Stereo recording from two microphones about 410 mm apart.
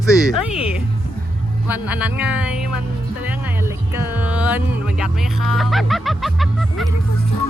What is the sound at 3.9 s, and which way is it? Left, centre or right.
Music, centre.